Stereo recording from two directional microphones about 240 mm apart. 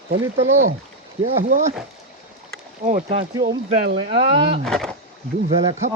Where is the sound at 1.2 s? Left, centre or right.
Right.